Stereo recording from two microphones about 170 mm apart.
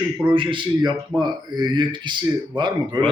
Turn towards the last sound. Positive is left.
turn(degrees=-25)  # may be behind; listen again after turning